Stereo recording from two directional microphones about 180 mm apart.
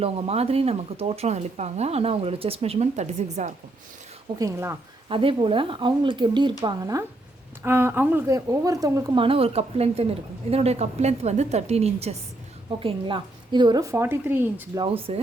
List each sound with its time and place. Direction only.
0.0 s speech: 35° right (ahead or behind)
4.4 s speech: 15° right (ahead or behind)
5.0 s speech: 30° right (ahead or behind); by 14.3 s 15° right (ahead or behind)
14.8 s speech: 30° right (ahead or behind)